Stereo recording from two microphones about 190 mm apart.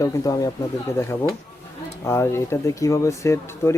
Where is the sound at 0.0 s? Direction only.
15° left (ahead or behind).